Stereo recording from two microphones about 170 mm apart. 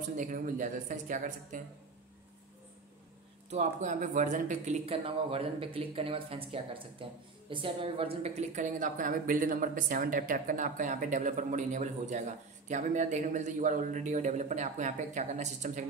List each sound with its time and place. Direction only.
0.2 s speech: 50° right (ahead or behind)
3.4 s speech: 45° right (ahead or behind)